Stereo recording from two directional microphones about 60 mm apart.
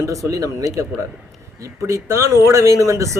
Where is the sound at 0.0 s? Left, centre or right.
Right.